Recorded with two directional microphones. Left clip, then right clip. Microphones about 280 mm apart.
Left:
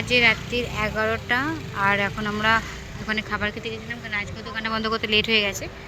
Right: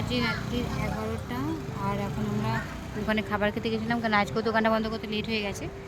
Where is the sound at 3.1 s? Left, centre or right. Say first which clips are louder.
Left 2 dB; centre.